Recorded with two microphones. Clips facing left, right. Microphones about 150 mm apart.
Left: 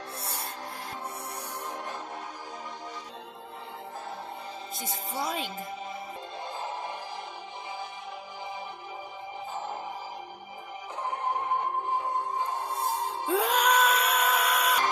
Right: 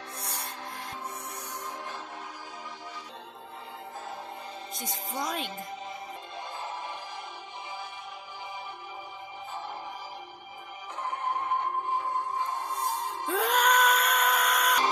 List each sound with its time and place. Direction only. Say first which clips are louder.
5.1 s a woman's voice: left 1 dB; 5° left (ahead or behind)
12.4 s music: left 1 dB; 10° left (ahead or behind)